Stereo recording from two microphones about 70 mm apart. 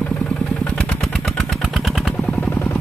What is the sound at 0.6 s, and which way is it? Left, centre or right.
Motorcycle, centre.